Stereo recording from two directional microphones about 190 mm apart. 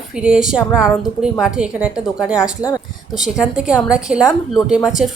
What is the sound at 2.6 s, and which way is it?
Speech, 20° left (ahead or behind).